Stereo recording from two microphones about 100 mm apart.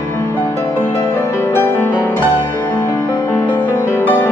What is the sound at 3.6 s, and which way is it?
Music, 15° right (ahead or behind).